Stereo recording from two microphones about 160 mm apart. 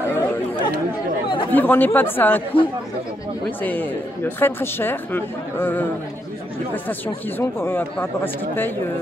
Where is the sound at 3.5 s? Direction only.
10° left (ahead or behind).